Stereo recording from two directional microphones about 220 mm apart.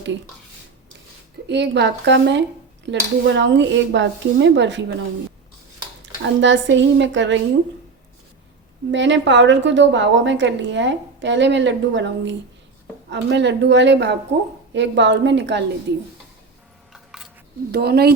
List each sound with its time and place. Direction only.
1.5 s a woman's voice: 50° right (ahead or behind)
6.2 s a woman's voice: 55° right (ahead or behind)
8.9 s a woman's voice: 55° right (ahead or behind)
16.9 s a sound: centre (ahead or behind)
17.7 s a woman's voice: 45° right (ahead or behind)